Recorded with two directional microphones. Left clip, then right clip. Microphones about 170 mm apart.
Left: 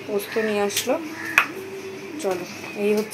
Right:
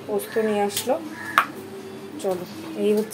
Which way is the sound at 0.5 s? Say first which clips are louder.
Left 1 dB; 5° right (ahead or behind).